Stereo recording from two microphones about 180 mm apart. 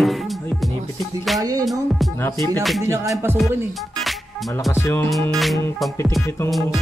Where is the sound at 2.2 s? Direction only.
15° left (ahead or behind).